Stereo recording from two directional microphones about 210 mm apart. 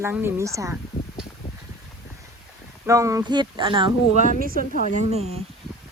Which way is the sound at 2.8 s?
15° right (ahead or behind).